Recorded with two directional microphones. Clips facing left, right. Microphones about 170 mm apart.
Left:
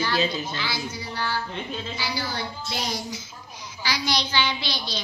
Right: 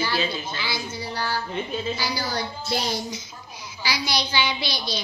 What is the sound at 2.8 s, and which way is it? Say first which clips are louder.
Speech: right 2 dB; 25° right (ahead or behind).